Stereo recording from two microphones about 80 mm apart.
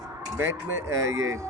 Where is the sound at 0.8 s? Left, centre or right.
Right.